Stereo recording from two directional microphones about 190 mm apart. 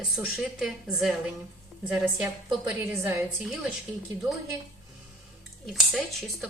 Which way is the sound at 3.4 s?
Centre (ahead or behind).